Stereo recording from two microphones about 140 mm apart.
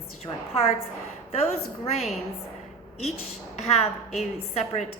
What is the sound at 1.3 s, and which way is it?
Speech, 50° left (ahead or behind).